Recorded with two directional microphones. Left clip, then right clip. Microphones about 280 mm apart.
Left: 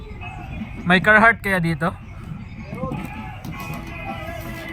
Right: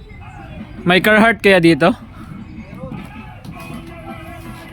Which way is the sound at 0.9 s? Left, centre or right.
Right.